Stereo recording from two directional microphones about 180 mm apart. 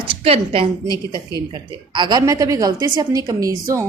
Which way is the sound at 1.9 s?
25° right (ahead or behind).